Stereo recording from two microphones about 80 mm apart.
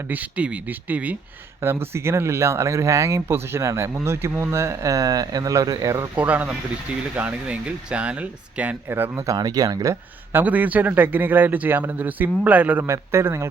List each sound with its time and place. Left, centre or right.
0.1 s a man's voice: centre
1.6 s speech: right
6.1 s a man's voice: centre
9.2 s speech: right
10.4 s a man's voice: right
12.9 s speech: right